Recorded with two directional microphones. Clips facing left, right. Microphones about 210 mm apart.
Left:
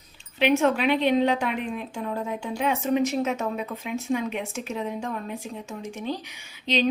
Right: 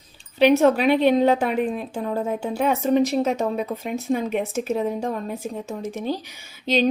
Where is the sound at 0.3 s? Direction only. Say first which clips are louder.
Right 5 dB; 40° right (ahead or behind).